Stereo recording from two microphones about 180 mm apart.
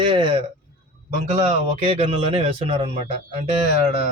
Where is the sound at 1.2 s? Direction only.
40° right (ahead or behind).